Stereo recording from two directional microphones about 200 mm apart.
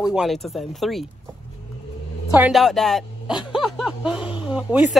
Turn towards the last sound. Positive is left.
turn(degrees=-5)  # may be behind; listen again after turning